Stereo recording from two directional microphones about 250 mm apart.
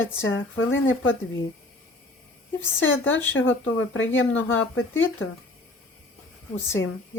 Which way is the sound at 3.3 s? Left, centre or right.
Left.